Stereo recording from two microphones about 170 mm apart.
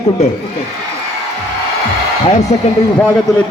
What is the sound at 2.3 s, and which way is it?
Speech, 40° left (ahead or behind).